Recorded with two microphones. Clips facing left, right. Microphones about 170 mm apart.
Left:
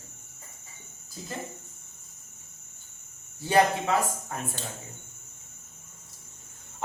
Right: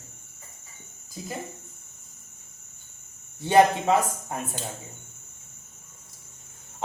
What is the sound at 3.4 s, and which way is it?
A man's voice, 25° right (ahead or behind).